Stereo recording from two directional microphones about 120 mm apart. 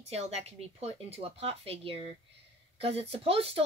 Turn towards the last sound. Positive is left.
turn(degrees=-55)  # may be behind; listen again after turning